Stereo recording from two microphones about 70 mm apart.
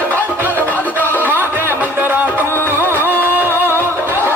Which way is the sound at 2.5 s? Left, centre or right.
Left.